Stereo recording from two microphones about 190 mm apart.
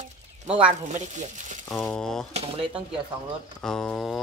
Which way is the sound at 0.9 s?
40° right (ahead or behind).